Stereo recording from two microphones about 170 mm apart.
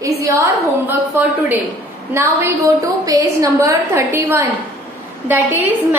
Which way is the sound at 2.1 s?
15° right (ahead or behind).